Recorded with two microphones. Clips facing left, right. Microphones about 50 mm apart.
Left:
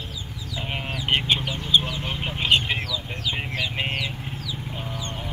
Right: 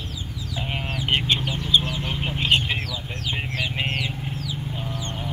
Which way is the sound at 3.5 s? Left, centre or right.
Centre.